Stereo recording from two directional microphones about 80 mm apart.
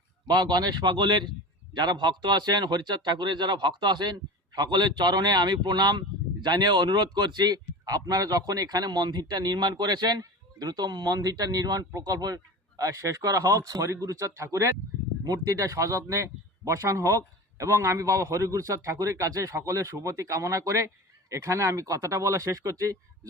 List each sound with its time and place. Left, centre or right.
0.3 s speech: right
12.8 s speech: right
15.2 s a man's voice: right